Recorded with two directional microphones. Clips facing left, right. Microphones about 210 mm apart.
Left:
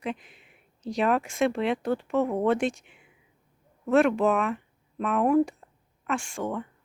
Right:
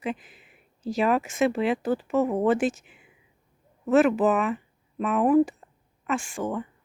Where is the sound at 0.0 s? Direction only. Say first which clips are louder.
Right 2 dB; 5° right (ahead or behind).